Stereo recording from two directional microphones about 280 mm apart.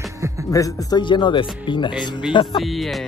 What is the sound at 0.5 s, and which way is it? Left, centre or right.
Speech, centre.